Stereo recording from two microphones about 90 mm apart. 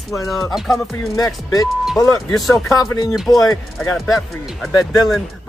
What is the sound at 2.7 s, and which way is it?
Speech, 40° left (ahead or behind).